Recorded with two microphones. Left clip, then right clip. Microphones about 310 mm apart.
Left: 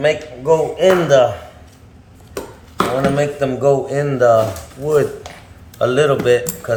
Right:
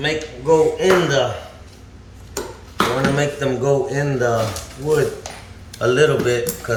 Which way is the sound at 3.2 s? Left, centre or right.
Centre.